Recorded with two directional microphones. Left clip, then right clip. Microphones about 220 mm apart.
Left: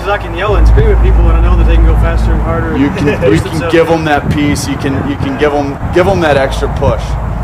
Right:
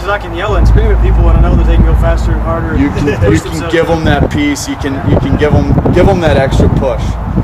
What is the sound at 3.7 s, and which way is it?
Speech, 35° left (ahead or behind).